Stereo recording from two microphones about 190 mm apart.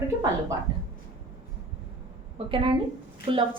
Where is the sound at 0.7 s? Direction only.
20° right (ahead or behind).